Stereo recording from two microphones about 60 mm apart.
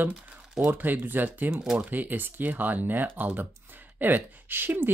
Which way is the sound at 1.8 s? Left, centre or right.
Right.